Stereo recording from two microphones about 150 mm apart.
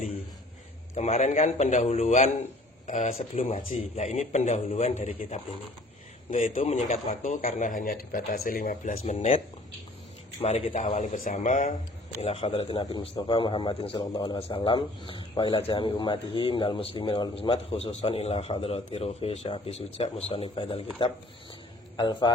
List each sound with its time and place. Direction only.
0.9 s a man's voice: 50° left (ahead or behind)
7.2 s speech: 60° left (ahead or behind)
9.1 s a man's voice: 40° left (ahead or behind)
10.4 s a man's voice: 45° left (ahead or behind)
12.2 s a man's voice: 40° left (ahead or behind)